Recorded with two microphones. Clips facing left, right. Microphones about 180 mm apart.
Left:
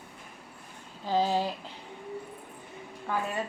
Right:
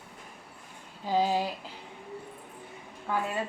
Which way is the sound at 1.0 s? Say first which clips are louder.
Even; 10° right (ahead or behind).